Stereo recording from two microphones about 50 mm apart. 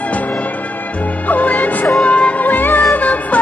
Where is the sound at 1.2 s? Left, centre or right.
Left.